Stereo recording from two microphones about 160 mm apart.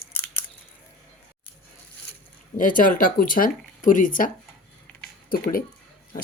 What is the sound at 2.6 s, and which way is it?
Speech, 60° left (ahead or behind).